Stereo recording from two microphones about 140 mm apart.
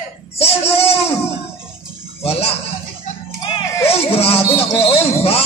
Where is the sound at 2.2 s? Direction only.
45° left (ahead or behind).